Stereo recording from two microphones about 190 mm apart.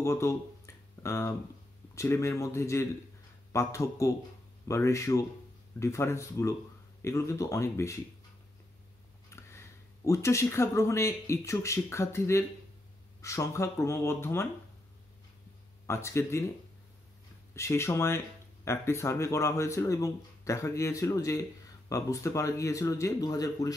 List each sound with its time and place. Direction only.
0.0 s a sound: 15° left (ahead or behind)
2.0 s speech: 15° left (ahead or behind)
9.3 s speech: 15° left (ahead or behind)
15.9 s speech: 15° left (ahead or behind)
17.6 s speech: 15° left (ahead or behind)